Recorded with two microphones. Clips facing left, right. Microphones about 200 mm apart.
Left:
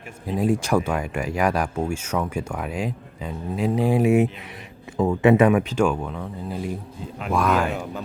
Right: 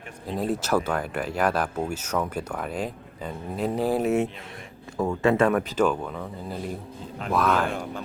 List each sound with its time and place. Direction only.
0.3 s speech: 10° left (ahead or behind)
4.0 s speech: 15° left (ahead or behind)
5.8 s speech: centre (ahead or behind)